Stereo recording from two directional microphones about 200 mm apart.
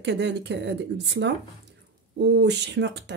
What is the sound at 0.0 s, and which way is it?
Speech, 60° right (ahead or behind).